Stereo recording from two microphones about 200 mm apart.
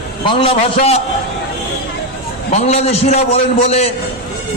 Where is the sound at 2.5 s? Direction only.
30° left (ahead or behind).